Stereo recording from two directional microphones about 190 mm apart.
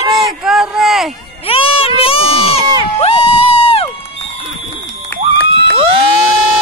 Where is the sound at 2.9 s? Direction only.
30° left (ahead or behind).